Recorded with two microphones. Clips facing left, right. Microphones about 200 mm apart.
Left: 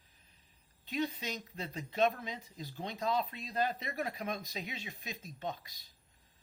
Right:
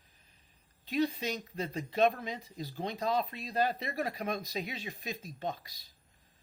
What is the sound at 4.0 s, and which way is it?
Speech, 35° right (ahead or behind).